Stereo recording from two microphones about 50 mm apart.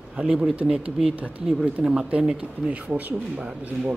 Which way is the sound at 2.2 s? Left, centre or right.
Right.